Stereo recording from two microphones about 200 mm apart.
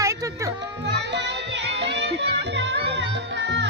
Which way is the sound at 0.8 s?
60° right (ahead or behind).